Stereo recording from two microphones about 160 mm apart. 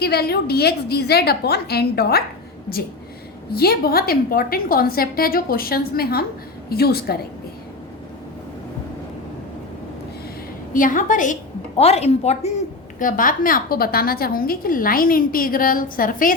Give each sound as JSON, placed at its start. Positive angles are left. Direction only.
{"t": 0.0, "sound": "a woman's voice", "side_deg": 80}
{"t": 3.5, "sound": "a woman's voice", "side_deg": 75}
{"t": 10.8, "sound": "a woman's voice", "side_deg": 55}
{"t": 11.8, "sound": "a woman's voice", "side_deg": 40}
{"t": 13.0, "sound": "a woman's voice", "side_deg": 60}